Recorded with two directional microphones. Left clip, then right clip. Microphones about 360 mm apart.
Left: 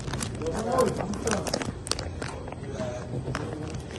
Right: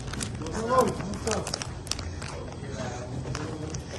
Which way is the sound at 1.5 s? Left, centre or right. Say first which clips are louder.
Left 3 dB; left.